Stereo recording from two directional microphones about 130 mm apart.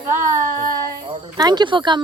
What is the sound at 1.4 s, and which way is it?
Speech, 30° right (ahead or behind).